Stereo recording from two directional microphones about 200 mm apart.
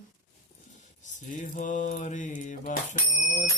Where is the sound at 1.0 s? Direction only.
40° left (ahead or behind).